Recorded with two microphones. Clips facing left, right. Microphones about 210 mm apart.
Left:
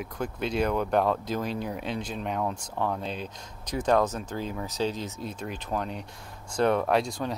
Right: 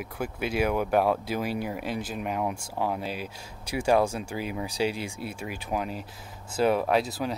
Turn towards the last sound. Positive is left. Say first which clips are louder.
# even
turn(degrees=-5)  # may be behind; listen again after turning